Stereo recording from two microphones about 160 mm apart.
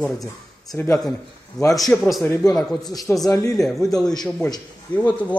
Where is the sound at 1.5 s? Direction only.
25° left (ahead or behind).